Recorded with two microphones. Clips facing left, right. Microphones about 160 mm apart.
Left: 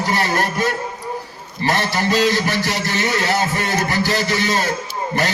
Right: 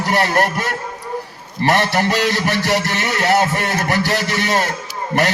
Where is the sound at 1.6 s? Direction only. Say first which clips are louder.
Right 3 dB; 65° right (ahead or behind).